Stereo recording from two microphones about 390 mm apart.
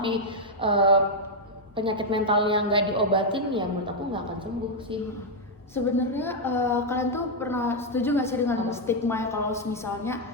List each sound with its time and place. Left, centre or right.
0.0 s a sound: centre
1.7 s a woman's voice: centre
5.7 s a woman's voice: centre